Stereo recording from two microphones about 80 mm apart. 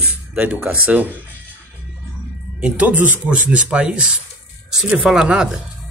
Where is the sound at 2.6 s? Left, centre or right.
Centre.